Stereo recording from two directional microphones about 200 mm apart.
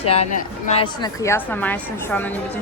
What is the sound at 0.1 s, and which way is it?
Speech, 35° left (ahead or behind).